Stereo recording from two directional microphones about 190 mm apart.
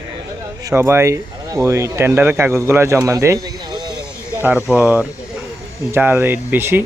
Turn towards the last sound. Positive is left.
turn(degrees=-10)  # may be behind; listen again after turning